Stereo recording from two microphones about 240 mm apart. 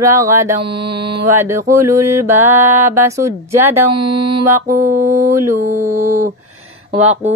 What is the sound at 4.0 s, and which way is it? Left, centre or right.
Mantra, right.